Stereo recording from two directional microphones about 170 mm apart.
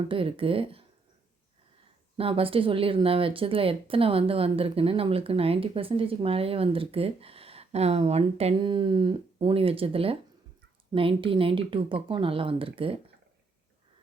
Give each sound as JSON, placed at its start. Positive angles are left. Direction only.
{"t": 0.1, "sound": "speech", "side_deg": -30}
{"t": 2.1, "sound": "speech", "side_deg": -35}